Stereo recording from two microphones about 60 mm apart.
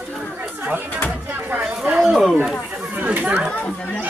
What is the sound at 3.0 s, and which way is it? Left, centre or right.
Speech, right.